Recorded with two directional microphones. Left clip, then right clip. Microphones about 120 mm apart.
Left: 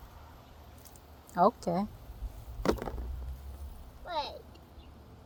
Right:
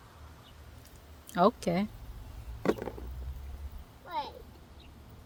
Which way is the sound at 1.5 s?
50° right (ahead or behind).